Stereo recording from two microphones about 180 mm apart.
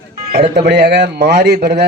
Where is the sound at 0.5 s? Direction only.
70° right (ahead or behind).